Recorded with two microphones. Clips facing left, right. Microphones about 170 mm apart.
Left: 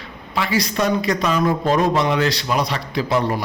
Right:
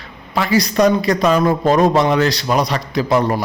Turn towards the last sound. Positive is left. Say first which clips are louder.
# right 4 dB
turn(degrees=-45)  # may be behind; listen again after turning